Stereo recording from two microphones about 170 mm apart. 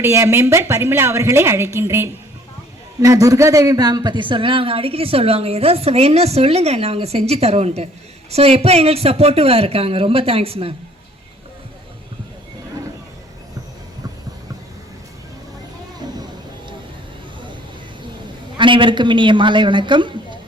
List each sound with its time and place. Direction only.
0.0 s a woman's voice: 15° right (ahead or behind); by 10.8 s 35° right (ahead or behind)
18.5 s a woman's voice: 30° right (ahead or behind)